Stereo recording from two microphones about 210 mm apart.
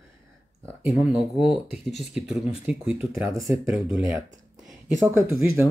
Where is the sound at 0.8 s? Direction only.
5° right (ahead or behind).